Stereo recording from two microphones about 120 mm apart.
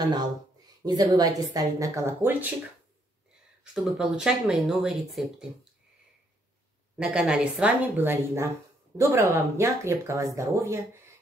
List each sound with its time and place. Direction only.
0.0 s speech: 35° right (ahead or behind)
3.7 s speech: centre (ahead or behind)
7.0 s a woman's voice: 5° right (ahead or behind); by 10.9 s 25° right (ahead or behind)